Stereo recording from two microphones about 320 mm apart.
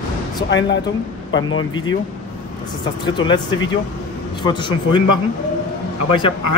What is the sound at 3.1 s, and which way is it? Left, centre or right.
Speech, centre.